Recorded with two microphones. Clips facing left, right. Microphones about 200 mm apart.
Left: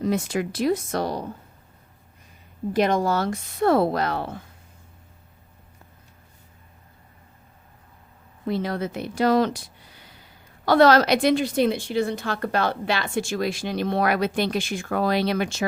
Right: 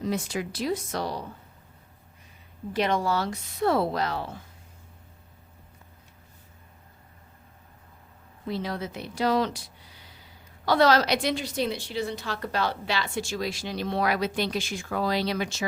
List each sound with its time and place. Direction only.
0.0 s a woman's voice: 55° left (ahead or behind)
2.7 s a woman's voice: 45° left (ahead or behind)
8.4 s a woman's voice: 55° left (ahead or behind)